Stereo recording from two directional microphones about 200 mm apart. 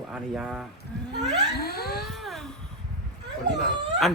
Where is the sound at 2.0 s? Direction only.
Centre (ahead or behind).